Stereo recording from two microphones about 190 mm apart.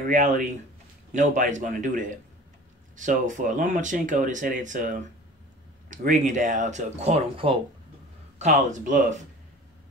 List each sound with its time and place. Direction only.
0.0 s speech: 40° right (ahead or behind)